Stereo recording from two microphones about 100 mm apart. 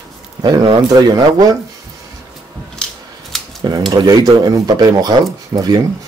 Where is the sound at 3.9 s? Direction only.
40° right (ahead or behind).